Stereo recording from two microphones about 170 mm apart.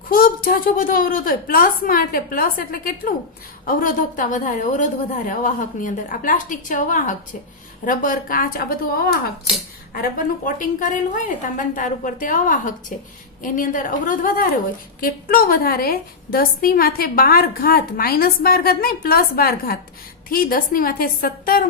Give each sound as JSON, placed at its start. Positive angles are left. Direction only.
{"t": 0.1, "sound": "a woman's voice", "side_deg": 55}
{"t": 9.9, "sound": "a woman's voice", "side_deg": 55}